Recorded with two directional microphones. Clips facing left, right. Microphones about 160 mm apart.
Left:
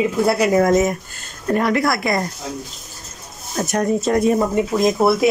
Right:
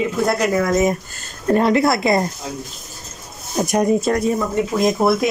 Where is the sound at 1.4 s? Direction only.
30° right (ahead or behind).